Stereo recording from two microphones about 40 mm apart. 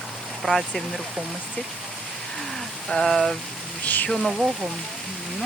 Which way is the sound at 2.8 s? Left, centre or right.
Centre.